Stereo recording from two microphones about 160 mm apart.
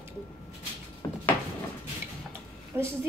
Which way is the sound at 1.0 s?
20° left (ahead or behind).